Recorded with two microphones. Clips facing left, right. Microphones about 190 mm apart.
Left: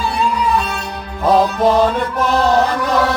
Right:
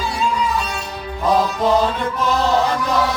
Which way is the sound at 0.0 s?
60° left (ahead or behind).